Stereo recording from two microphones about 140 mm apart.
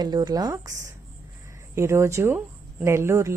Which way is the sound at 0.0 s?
30° right (ahead or behind).